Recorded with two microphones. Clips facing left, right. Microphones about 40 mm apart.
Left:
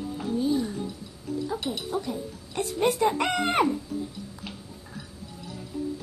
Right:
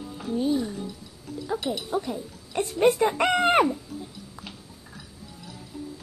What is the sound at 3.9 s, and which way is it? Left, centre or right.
Music, centre.